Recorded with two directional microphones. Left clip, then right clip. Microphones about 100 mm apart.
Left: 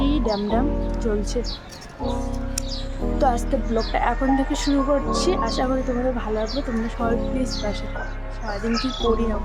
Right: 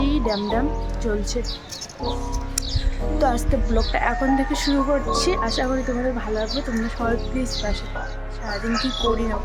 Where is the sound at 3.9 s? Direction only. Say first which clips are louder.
Right 1 dB; 10° right (ahead or behind).